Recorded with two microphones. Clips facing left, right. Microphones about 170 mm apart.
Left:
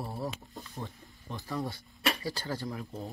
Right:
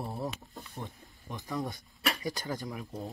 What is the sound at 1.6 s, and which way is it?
Speech, 20° right (ahead or behind).